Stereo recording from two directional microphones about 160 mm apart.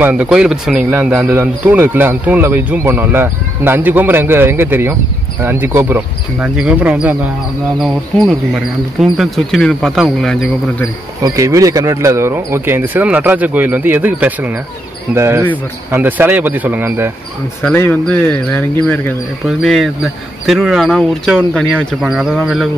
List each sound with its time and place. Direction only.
0.0 s a man's voice: 5° right (ahead or behind)
7.8 s speech: centre (ahead or behind)
11.2 s a man's voice: 20° right (ahead or behind)
17.6 s speech: 10° left (ahead or behind)
19.4 s speech: centre (ahead or behind)